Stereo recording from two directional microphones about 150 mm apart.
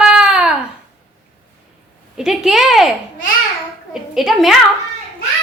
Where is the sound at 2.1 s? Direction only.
5° right (ahead or behind).